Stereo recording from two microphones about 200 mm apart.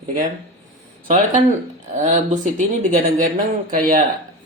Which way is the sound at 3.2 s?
45° right (ahead or behind).